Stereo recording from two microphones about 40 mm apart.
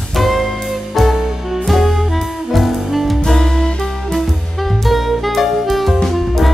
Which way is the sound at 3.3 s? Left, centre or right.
Centre.